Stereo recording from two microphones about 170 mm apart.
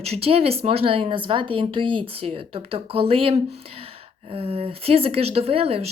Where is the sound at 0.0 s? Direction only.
35° right (ahead or behind).